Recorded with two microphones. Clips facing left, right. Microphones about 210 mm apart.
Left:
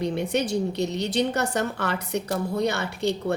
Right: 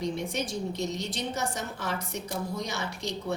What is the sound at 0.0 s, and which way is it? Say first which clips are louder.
A woman's voice: left 6 dB; 65° left (ahead or behind).